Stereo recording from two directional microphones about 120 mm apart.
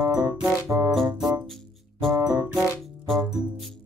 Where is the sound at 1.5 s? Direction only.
Centre (ahead or behind).